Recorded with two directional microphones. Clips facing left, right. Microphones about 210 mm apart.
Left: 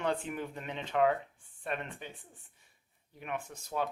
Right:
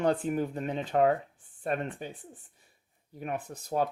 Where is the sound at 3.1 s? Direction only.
40° right (ahead or behind).